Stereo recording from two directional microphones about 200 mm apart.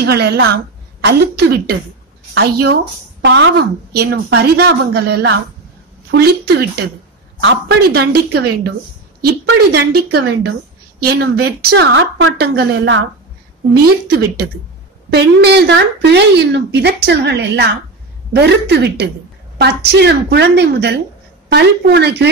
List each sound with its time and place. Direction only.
0.0 s a woman's voice: 55° right (ahead or behind)
9.9 s a woman's voice: 55° right (ahead or behind); by 12.3 s 75° right (ahead or behind)
12.4 s a woman's voice: 60° right (ahead or behind)
14.0 s a woman's voice: 55° right (ahead or behind)